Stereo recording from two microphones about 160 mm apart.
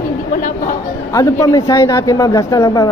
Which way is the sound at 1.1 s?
20° left (ahead or behind).